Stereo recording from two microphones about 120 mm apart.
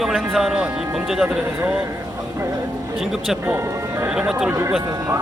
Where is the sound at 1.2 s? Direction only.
15° right (ahead or behind).